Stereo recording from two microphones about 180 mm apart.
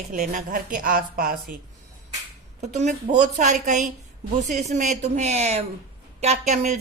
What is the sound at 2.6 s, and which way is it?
A woman's voice, 40° right (ahead or behind).